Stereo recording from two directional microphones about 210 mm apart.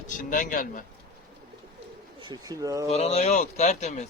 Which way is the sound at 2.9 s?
30° left (ahead or behind).